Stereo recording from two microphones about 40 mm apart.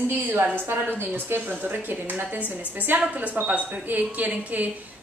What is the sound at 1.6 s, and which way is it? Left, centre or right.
A woman's voice, right.